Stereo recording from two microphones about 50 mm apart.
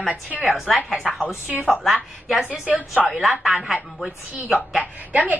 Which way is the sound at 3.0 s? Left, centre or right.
Centre.